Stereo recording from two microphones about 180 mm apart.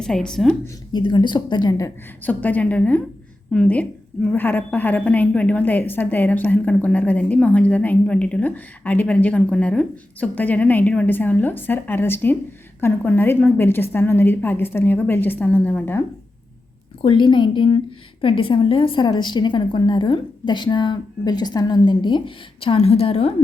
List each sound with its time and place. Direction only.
0.0 s a woman's voice: 5° left (ahead or behind)
0.9 s a woman's voice: 25° left (ahead or behind)
2.2 s a woman's voice: 10° left (ahead or behind)
17.0 s a woman's voice: 30° left (ahead or behind)